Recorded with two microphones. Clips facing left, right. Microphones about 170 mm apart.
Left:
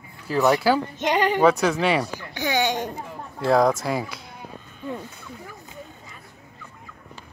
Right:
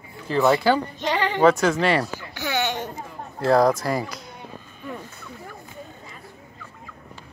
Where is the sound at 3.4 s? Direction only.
Centre (ahead or behind).